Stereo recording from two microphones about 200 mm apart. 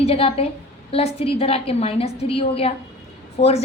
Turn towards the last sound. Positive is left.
turn(degrees=30)  # may be behind; listen again after turning